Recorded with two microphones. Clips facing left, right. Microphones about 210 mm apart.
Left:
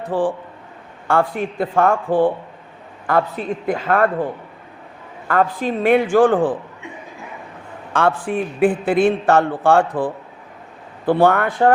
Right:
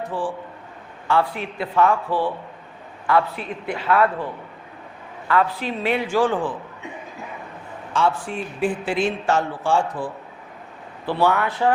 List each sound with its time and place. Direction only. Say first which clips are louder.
0.1 s a man's voice: left 7 dB; 55° left (ahead or behind)
5.3 s a man's voice: left 3 dB; 45° left (ahead or behind)
7.9 s a man's voice: left 4 dB; 55° left (ahead or behind)